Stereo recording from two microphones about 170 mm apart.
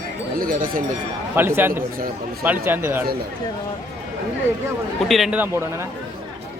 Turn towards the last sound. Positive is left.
turn(degrees=-10)  # may be behind; listen again after turning